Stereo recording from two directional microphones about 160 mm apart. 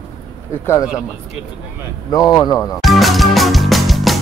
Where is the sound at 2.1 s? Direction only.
20° left (ahead or behind).